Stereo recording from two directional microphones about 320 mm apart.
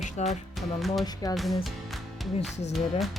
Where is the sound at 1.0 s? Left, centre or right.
Centre.